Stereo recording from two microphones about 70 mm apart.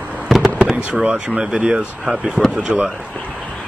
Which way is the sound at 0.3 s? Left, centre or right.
Centre.